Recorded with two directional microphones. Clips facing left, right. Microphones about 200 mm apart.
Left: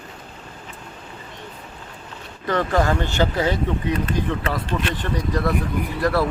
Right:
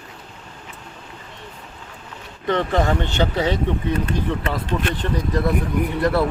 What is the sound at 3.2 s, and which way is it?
Speech, centre (ahead or behind).